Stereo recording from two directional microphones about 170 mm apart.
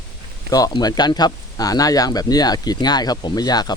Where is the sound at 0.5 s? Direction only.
20° left (ahead or behind).